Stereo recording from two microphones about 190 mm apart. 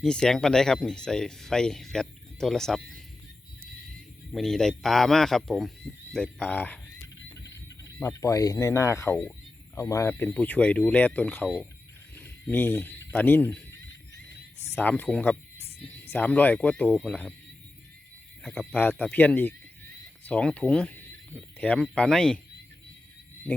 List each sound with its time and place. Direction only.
0.0 s speech: 5° left (ahead or behind)
4.3 s speech: centre (ahead or behind)
7.9 s speech: 15° left (ahead or behind)
12.1 s a sound: 10° left (ahead or behind)
13.1 s speech: 10° left (ahead or behind)
14.7 s speech: 10° left (ahead or behind)
18.4 s speech: centre (ahead or behind)